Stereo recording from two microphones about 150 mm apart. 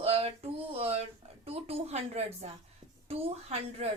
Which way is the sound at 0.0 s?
40° right (ahead or behind).